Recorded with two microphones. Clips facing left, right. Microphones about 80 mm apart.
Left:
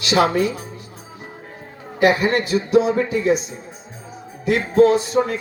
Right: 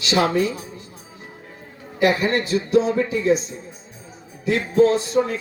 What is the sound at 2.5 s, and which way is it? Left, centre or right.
Speech, left.